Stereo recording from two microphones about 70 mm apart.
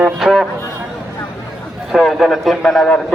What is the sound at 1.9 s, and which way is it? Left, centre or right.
Speech, centre.